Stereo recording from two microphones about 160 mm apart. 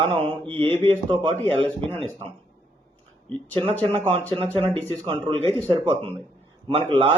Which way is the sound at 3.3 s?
35° right (ahead or behind).